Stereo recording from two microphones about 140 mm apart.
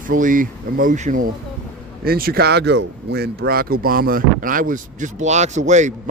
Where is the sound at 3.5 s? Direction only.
90° right; by 5.9 s 55° right (ahead or behind).